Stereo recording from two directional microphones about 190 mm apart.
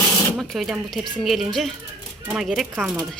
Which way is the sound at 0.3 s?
Centre (ahead or behind).